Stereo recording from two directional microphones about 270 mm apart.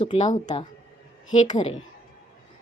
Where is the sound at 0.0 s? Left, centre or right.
Left.